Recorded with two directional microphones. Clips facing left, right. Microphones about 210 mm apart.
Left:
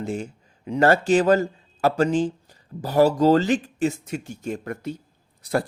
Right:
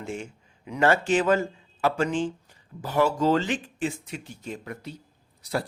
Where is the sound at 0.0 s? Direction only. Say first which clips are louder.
Left 6 dB; 40° left (ahead or behind).